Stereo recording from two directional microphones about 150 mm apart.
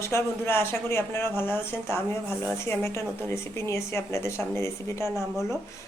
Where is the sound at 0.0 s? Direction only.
15° left (ahead or behind).